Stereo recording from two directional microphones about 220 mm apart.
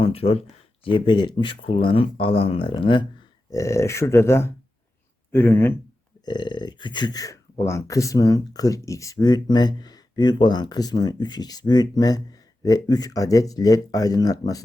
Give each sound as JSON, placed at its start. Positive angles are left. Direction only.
{"t": 0.0, "sound": "speech", "side_deg": 25}